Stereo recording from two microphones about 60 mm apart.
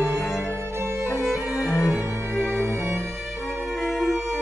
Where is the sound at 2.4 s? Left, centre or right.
Right.